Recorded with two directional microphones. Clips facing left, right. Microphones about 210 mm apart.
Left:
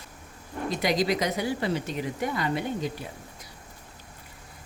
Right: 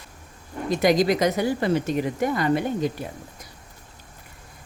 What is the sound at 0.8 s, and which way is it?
Speech, 45° right (ahead or behind).